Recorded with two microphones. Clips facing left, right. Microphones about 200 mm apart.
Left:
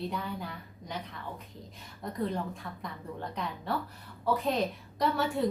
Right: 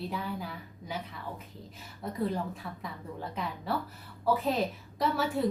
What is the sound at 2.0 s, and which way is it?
A woman's voice, 5° right (ahead or behind).